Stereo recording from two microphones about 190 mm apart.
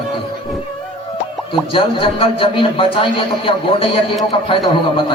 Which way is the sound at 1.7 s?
30° left (ahead or behind).